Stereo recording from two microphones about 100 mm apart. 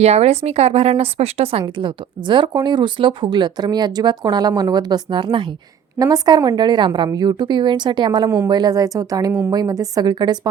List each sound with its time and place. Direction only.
0.0 s speech: 90° right
1.6 s speech: 55° right (ahead or behind)
6.0 s speech: 45° right (ahead or behind)